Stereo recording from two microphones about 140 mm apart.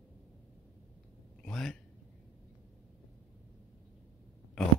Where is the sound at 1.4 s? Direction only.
5° left (ahead or behind).